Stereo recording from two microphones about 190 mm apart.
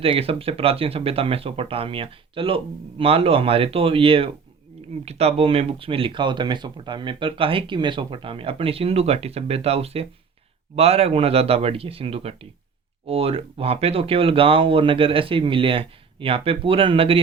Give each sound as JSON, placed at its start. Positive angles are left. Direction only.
{"t": 0.0, "sound": "a man's voice", "side_deg": -30}